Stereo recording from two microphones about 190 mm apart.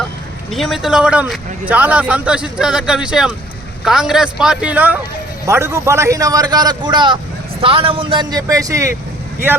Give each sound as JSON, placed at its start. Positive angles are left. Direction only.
{"t": 0.5, "sound": "a man's voice", "side_deg": 0}